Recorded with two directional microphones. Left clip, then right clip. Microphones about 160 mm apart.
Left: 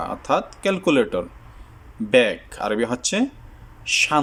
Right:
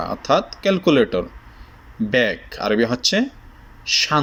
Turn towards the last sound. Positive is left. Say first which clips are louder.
# right 1 dB
turn(degrees=15)  # may be behind; listen again after turning